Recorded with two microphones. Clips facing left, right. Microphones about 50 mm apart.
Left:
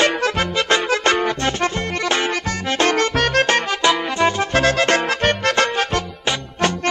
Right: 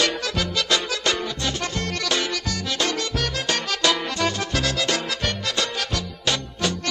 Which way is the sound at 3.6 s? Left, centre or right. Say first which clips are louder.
Left 5 dB; left.